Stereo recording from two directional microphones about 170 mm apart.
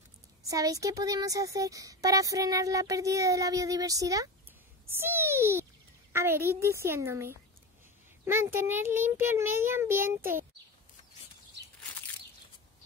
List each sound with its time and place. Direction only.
0.4 s a woman's voice: 20° right (ahead or behind)
4.8 s a sound: 15° right (ahead or behind)
6.1 s a child's voice: 15° right (ahead or behind)